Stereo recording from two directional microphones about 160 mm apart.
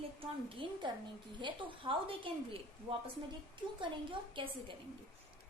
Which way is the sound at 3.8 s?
30° right (ahead or behind).